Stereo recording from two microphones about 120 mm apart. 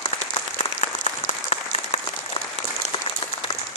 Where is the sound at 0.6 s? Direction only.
65° left (ahead or behind).